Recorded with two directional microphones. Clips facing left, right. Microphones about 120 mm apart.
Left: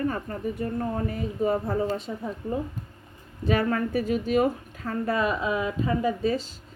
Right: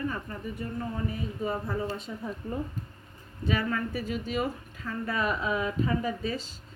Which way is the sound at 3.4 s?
40° left (ahead or behind).